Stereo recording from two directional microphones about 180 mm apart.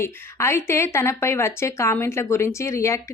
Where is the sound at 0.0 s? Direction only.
15° left (ahead or behind).